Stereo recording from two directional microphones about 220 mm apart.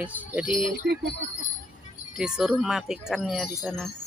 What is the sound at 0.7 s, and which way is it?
Speech, 45° right (ahead or behind).